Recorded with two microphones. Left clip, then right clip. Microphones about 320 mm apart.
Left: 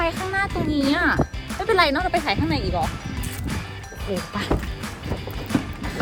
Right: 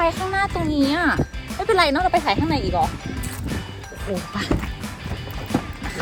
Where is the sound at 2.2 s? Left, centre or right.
Right.